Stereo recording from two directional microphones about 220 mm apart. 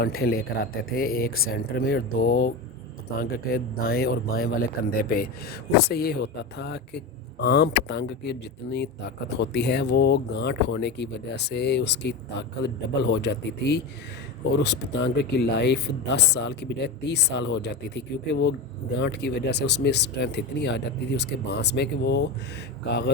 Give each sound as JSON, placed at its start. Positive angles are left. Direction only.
{"t": 0.0, "sound": "speech", "side_deg": 45}